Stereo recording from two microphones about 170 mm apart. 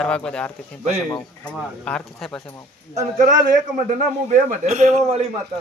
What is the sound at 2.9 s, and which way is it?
A man's voice, 45° right (ahead or behind).